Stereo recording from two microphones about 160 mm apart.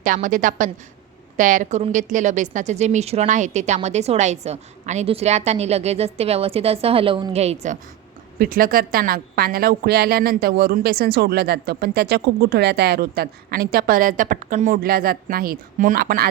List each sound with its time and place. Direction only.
0.0 s a woman's voice: 55° right (ahead or behind)
8.4 s a woman's voice: 65° right (ahead or behind)